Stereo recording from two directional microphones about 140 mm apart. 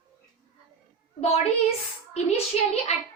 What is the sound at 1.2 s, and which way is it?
A woman's voice, 45° left (ahead or behind).